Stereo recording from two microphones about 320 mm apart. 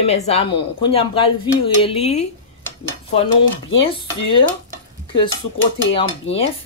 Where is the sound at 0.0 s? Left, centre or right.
Centre.